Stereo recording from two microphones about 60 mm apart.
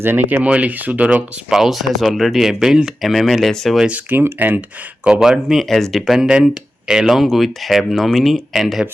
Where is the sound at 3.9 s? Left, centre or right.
Right.